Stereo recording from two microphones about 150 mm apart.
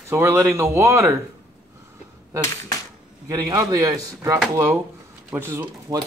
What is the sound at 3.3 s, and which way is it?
Speech, 25° right (ahead or behind).